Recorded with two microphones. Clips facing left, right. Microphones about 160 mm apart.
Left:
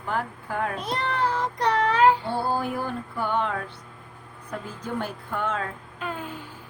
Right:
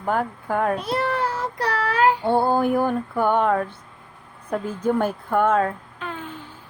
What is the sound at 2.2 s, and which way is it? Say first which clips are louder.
Music: right 7 dB; 55° right (ahead or behind).